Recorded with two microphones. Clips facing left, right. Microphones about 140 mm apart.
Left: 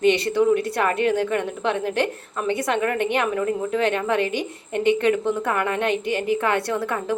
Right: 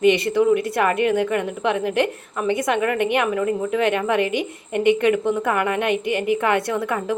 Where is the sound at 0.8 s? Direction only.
10° right (ahead or behind).